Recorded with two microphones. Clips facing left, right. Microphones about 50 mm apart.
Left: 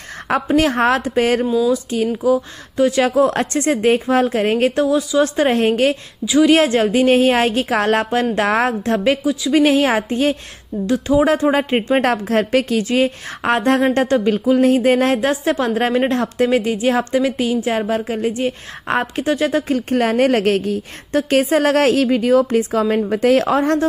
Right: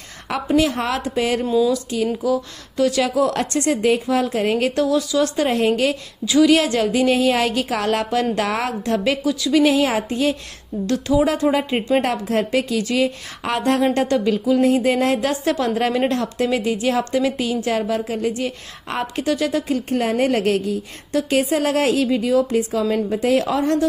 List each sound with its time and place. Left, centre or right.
0.6 s a woman's voice: left
1.4 s speech: centre
1.7 s a woman's voice: left
12.0 s speech: left
12.8 s a woman's voice: left
15.2 s a woman's voice: left